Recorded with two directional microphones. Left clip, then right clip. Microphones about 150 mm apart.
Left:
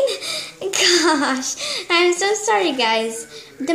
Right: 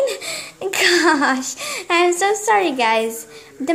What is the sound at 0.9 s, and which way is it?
A woman's voice, 50° right (ahead or behind).